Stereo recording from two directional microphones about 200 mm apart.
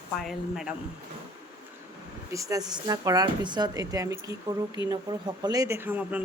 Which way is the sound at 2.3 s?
15° right (ahead or behind).